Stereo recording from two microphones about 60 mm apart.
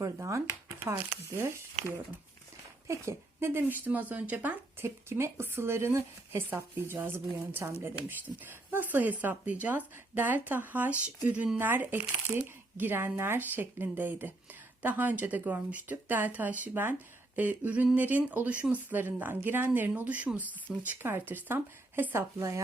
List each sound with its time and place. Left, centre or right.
0.0 s speech: right
2.8 s speech: right
4.8 s speech: right
8.4 s speech: right
11.5 s speech: right
19.9 s speech: right
22.1 s speech: right